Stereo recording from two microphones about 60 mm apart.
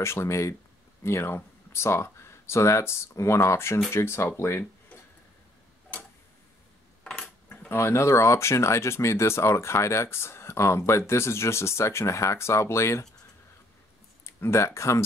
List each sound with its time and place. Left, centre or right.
0.0 s speech: left
1.0 s speech: left
7.4 s cutlery: left
7.7 s speech: left
14.2 s speech: left